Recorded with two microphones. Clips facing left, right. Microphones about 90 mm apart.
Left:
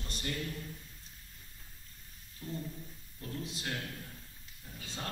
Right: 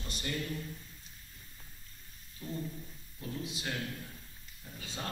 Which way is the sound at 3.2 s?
10° right (ahead or behind).